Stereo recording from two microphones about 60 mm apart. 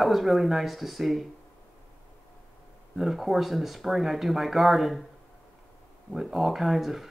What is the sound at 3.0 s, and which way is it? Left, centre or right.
Speech, centre.